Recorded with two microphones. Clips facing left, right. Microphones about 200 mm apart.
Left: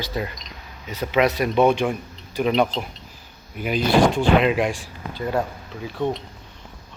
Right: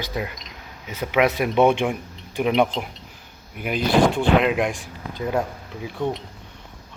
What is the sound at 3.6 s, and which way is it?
Speech, 55° right (ahead or behind).